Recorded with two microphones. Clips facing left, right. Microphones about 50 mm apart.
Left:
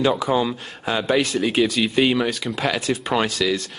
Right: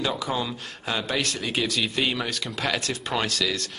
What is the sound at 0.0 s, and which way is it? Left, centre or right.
Speech, centre.